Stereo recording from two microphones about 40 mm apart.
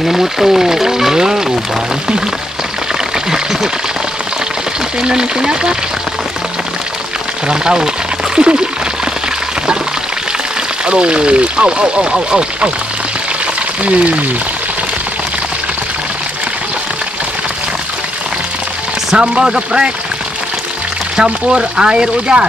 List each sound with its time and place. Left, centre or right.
0.0 s speech: centre
5.0 s speech: centre
7.4 s speech: right
10.9 s speech: right
13.8 s speech: right
19.1 s speech: centre
21.2 s speech: centre